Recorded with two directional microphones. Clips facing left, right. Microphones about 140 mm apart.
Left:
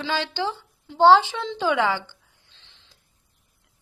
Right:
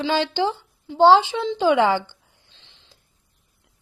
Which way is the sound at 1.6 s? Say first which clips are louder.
Right 5 dB; 30° right (ahead or behind).